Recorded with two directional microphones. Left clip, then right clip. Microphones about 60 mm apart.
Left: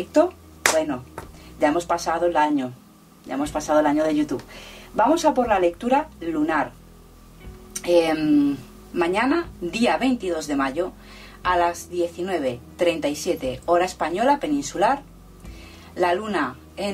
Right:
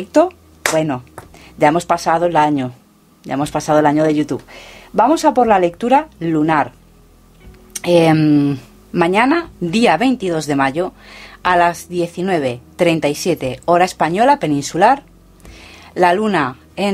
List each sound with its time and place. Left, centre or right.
0.7 s speech: right
7.7 s speech: right